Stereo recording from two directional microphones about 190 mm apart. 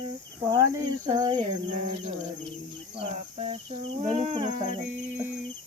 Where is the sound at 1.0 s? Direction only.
20° right (ahead or behind).